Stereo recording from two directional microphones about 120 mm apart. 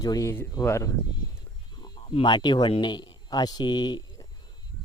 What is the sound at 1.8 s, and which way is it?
Speech, 35° left (ahead or behind).